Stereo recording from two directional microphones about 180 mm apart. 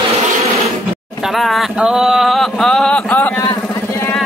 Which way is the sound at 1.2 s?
Centre (ahead or behind).